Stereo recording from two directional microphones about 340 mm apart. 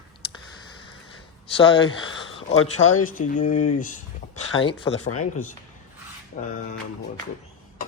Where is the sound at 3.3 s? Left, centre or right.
Left.